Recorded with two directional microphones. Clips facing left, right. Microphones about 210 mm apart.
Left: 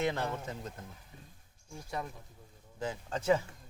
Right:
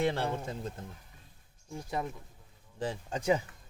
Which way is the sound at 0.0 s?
30° right (ahead or behind).